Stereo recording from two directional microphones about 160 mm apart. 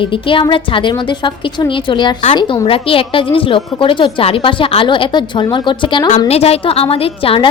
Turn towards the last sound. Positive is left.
turn(degrees=35)  # may be behind; listen again after turning